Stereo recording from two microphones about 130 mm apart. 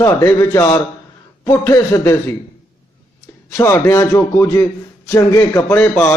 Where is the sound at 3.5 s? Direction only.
20° left (ahead or behind).